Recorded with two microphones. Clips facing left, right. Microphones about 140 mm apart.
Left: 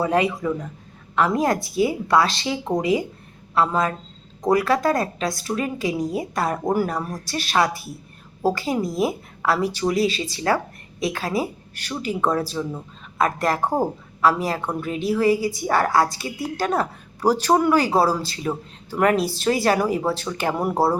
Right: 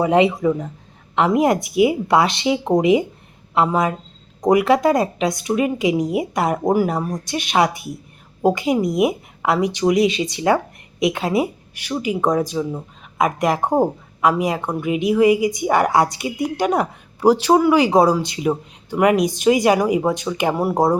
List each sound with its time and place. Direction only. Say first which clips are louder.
0.0 s a woman's voice: right 5 dB; 20° right (ahead or behind)
11.7 s speech: right 4 dB; 10° right (ahead or behind)